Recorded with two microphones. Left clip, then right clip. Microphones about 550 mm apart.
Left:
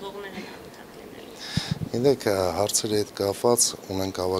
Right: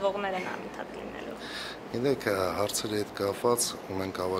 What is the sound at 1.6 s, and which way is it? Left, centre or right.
Speech, left.